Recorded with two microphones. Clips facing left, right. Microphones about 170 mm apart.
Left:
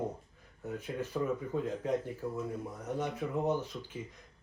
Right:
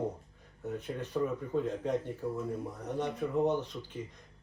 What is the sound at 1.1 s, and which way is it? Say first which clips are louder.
Speech: right 2 dB; centre (ahead or behind).